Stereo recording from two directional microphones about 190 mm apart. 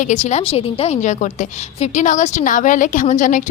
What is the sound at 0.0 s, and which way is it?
A woman's voice, 40° left (ahead or behind).